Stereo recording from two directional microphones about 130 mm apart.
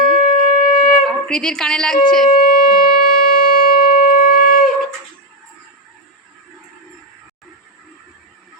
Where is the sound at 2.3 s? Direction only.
90° left.